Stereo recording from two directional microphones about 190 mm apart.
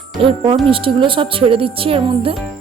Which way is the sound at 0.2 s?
30° right (ahead or behind).